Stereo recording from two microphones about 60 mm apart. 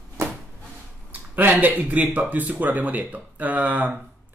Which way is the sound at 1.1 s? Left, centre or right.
Right.